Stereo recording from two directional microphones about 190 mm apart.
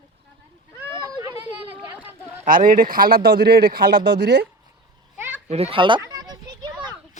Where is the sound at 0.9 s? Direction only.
20° right (ahead or behind).